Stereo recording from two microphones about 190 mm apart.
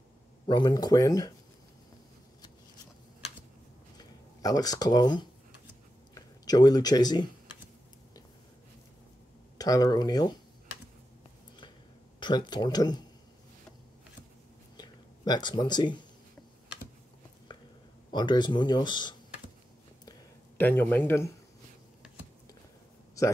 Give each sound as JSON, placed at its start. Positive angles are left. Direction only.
{"t": 0.5, "sound": "speech", "side_deg": 20}
{"t": 4.0, "sound": "speech", "side_deg": 20}
{"t": 9.6, "sound": "speech", "side_deg": 20}
{"t": 12.2, "sound": "speech", "side_deg": 25}
{"t": 14.8, "sound": "a sound", "side_deg": 20}
{"t": 18.1, "sound": "speech", "side_deg": 20}
{"t": 20.1, "sound": "a sound", "side_deg": 10}